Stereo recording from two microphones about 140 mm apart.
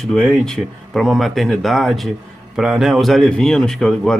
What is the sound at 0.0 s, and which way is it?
Speech, 5° left (ahead or behind).